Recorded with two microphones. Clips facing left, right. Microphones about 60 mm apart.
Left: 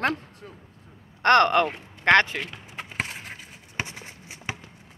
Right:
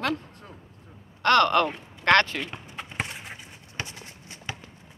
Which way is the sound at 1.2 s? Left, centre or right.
Left.